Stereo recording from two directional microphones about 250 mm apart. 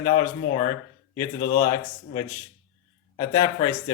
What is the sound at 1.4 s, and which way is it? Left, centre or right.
Speech, left.